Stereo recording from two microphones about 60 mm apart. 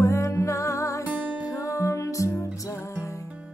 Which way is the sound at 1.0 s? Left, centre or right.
Right.